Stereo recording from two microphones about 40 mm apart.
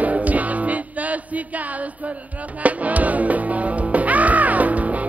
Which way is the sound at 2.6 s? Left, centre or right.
Right.